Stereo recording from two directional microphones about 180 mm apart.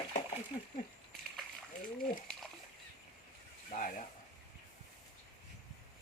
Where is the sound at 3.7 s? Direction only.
45° left (ahead or behind).